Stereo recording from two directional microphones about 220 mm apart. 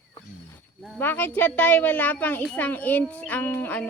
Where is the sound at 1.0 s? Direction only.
10° left (ahead or behind).